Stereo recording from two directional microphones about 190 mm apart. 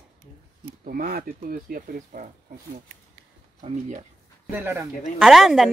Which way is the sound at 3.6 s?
35° right (ahead or behind).